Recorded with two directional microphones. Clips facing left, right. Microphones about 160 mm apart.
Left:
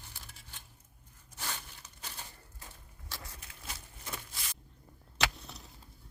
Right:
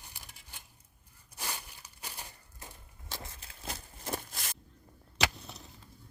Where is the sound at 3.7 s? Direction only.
45° right (ahead or behind).